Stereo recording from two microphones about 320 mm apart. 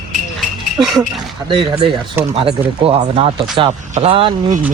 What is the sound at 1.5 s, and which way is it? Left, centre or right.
Speech, centre.